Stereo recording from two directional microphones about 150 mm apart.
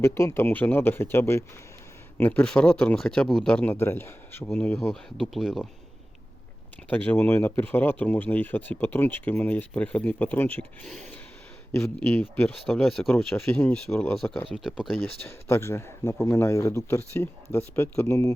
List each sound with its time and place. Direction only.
0.0 s speech: 15° left (ahead or behind); by 5.6 s centre (ahead or behind)
6.9 s speech: 10° left (ahead or behind)
15.0 s speech: 15° left (ahead or behind)